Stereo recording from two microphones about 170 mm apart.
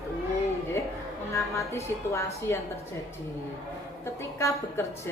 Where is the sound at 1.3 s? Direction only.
15° left (ahead or behind).